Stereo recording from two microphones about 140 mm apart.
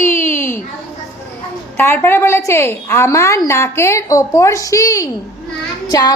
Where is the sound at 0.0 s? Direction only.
15° left (ahead or behind).